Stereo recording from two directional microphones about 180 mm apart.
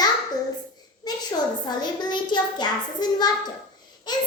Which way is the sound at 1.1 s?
20° left (ahead or behind).